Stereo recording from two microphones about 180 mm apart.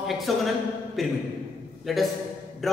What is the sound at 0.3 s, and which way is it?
Speech, centre (ahead or behind).